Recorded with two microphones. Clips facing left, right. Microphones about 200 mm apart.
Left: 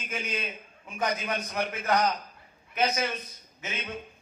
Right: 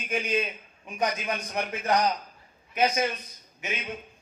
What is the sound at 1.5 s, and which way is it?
Speech, 25° right (ahead or behind).